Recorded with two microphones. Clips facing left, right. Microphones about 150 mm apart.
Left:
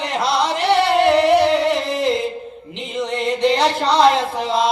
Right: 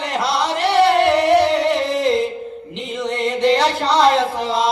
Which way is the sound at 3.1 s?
Centre (ahead or behind).